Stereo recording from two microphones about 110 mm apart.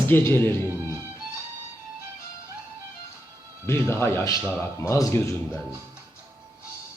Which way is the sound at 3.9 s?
20° left (ahead or behind).